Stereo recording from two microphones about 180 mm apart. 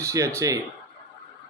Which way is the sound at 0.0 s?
15° right (ahead or behind).